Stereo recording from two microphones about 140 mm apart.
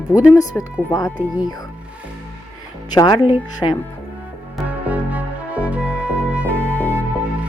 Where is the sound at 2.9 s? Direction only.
25° left (ahead or behind).